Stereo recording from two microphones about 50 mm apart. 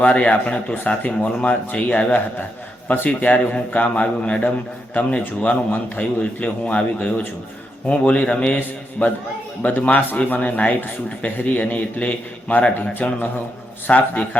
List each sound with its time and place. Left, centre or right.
0.0 s a man's voice: left
9.6 s a man's voice: left